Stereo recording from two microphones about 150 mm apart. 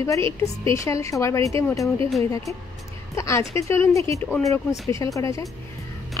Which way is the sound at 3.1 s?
20° left (ahead or behind).